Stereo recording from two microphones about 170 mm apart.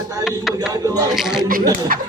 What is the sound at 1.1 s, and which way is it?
Speech, centre (ahead or behind).